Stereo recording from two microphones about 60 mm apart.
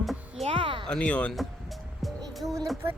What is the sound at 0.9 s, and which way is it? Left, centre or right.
Speech, centre.